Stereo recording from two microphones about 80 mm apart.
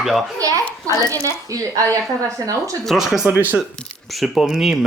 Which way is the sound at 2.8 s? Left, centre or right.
Centre.